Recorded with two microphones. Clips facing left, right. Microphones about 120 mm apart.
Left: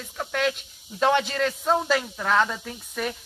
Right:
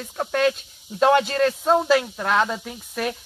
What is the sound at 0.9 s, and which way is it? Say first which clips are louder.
Speech: right 4 dB; 15° right (ahead or behind).